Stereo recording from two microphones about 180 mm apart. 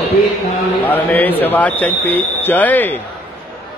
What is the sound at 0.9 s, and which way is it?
Speech, 10° left (ahead or behind).